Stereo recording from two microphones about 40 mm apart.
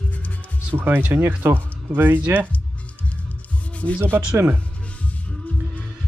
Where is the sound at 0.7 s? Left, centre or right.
Right.